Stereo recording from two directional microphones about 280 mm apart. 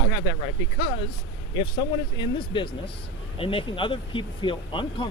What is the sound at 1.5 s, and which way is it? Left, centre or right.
Speech, centre.